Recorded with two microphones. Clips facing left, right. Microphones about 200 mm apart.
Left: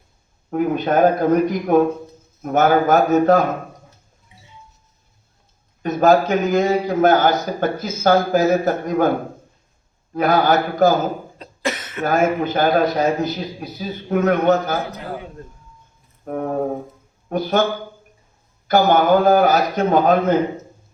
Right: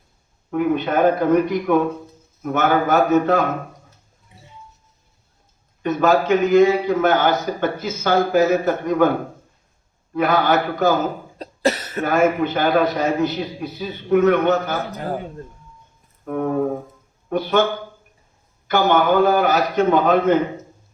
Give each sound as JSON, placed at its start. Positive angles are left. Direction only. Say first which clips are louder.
{"t": 0.5, "sound": "a man's voice", "louder": "left 1 dB", "side_deg": 40}
{"t": 5.8, "sound": "a man's voice", "louder": "left 2 dB", "side_deg": 40}
{"t": 10.2, "sound": "a man's voice", "louder": "left 1 dB", "side_deg": 40}
{"t": 11.3, "sound": "cough", "louder": "right 5 dB", "side_deg": -40}
{"t": 12.0, "sound": "a man's voice", "louder": "even", "side_deg": 40}
{"t": 14.9, "sound": "a man's voice", "louder": "right 4 dB", "side_deg": -40}
{"t": 16.2, "sound": "a man's voice", "louder": "right 1 dB", "side_deg": 40}
{"t": 18.7, "sound": "a man's voice", "louder": "left 2 dB", "side_deg": 40}